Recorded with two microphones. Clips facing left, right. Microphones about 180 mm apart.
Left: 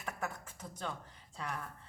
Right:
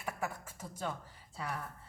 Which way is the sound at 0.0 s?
10° right (ahead or behind).